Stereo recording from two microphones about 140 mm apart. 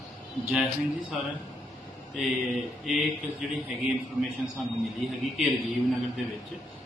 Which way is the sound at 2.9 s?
Centre (ahead or behind).